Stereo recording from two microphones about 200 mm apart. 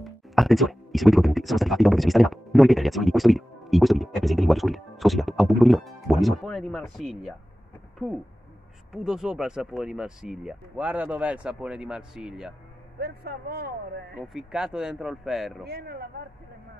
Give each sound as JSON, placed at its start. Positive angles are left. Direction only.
{"t": 0.0, "sound": "speech", "side_deg": 0}
{"t": 8.9, "sound": "speech", "side_deg": 0}
{"t": 13.0, "sound": "speech", "side_deg": -55}
{"t": 14.1, "sound": "speech", "side_deg": 0}
{"t": 15.6, "sound": "speech", "side_deg": -50}